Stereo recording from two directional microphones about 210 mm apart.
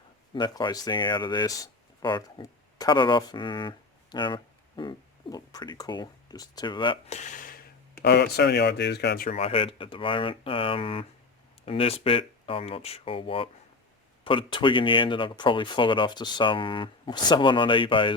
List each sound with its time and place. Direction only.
0.3 s speech: 20° left (ahead or behind); by 7.6 s 40° left (ahead or behind)
8.0 s speech: 55° left (ahead or behind)
9.3 s speech: 25° left (ahead or behind)